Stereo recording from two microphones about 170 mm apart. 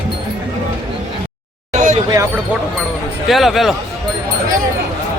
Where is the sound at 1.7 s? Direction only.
45° right (ahead or behind).